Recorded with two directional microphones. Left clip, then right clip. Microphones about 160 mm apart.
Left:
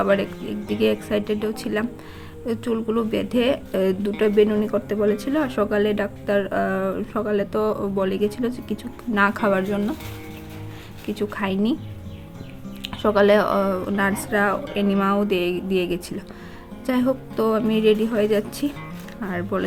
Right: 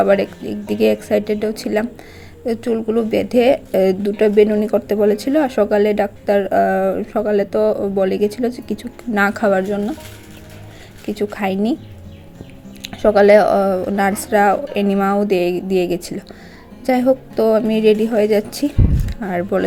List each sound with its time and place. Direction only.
0.0 s a woman's voice: 20° right (ahead or behind)
11.0 s a woman's voice: 15° right (ahead or behind)
12.8 s a woman's voice: 15° right (ahead or behind)